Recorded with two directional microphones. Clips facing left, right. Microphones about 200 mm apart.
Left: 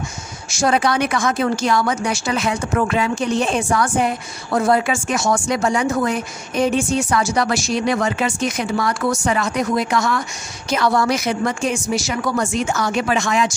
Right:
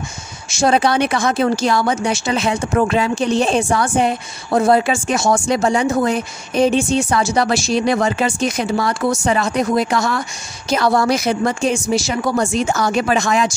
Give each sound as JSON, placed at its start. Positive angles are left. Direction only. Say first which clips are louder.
{"t": 0.5, "sound": "a woman's voice", "louder": "right 3 dB", "side_deg": -25}